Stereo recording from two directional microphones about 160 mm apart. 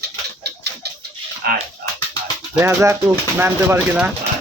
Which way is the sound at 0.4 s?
90° right.